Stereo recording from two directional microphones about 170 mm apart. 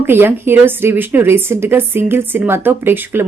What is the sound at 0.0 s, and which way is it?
A woman's voice, 15° right (ahead or behind).